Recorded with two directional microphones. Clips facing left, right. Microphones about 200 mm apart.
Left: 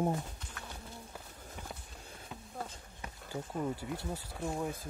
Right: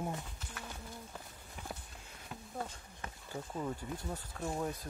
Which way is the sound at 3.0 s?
10° left (ahead or behind).